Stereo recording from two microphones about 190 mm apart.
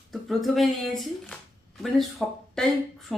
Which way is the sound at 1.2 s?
Centre (ahead or behind).